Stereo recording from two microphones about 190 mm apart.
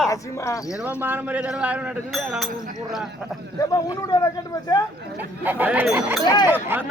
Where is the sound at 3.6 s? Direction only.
20° left (ahead or behind).